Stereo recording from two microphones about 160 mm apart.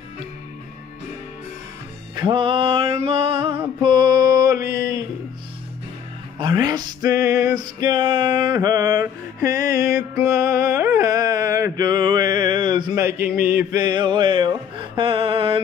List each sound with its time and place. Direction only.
2.1 s music: 30° right (ahead or behind)
6.3 s music: 30° right (ahead or behind)